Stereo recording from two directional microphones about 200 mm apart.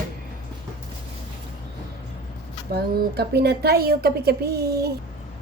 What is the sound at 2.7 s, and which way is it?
A woman's voice, 55° right (ahead or behind).